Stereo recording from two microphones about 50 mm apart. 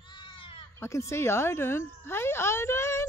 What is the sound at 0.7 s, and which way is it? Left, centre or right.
Speech, left.